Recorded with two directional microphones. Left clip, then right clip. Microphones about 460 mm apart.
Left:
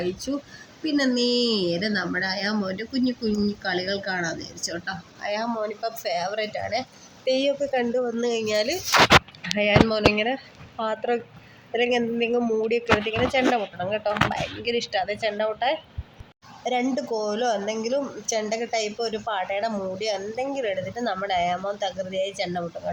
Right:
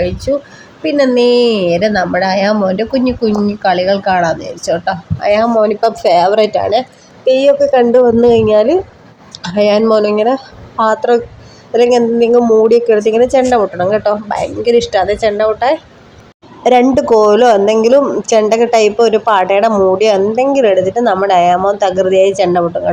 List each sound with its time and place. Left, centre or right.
0.9 s a woman's voice: left